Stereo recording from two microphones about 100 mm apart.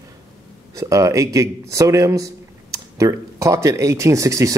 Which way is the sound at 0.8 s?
35° right (ahead or behind).